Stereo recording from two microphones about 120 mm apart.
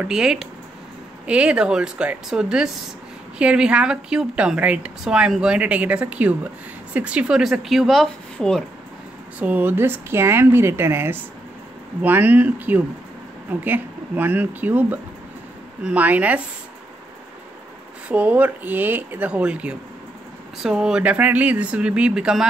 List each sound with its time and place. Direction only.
0.0 s a woman's voice: 5° right (ahead or behind)
9.4 s a woman's voice: 15° right (ahead or behind)
18.0 s a woman's voice: 10° right (ahead or behind)